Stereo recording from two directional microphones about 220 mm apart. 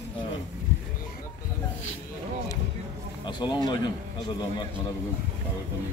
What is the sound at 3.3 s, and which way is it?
Speech, 20° left (ahead or behind).